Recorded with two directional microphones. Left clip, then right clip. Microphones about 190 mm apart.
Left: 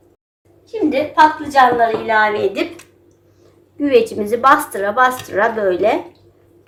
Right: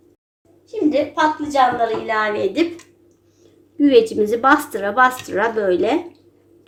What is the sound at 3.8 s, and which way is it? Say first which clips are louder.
A woman's voice: right 1 dB; 40° right (ahead or behind).